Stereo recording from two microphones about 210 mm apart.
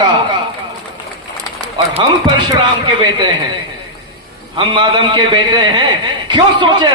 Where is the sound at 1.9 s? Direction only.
20° right (ahead or behind).